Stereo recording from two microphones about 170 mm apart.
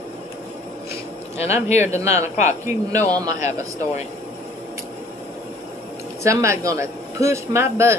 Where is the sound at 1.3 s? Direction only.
40° left (ahead or behind).